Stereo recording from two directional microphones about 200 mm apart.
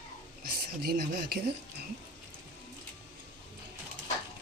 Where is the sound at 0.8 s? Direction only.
50° right (ahead or behind).